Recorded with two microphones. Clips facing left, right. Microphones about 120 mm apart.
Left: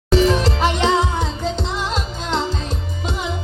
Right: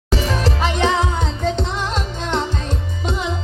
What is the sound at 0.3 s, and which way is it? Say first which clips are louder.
Music: left 3 dB; 15° left (ahead or behind).